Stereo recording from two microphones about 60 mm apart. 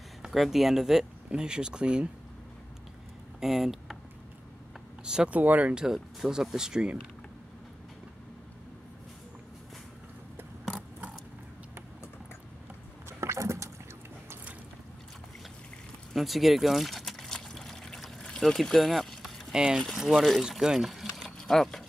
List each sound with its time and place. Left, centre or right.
0.2 s speech: centre
3.3 s a sound: centre
5.0 s speech: centre
5.4 s speech: right
5.8 s speech: centre
13.2 s rowboat: right
16.1 s pour: centre
18.2 s vehicle: centre
19.5 s speech: centre
20.4 s pour: centre